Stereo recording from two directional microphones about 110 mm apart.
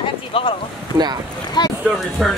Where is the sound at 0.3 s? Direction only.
55° left (ahead or behind).